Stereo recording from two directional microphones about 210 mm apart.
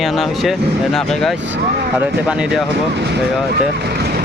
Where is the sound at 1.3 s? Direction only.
60° right (ahead or behind).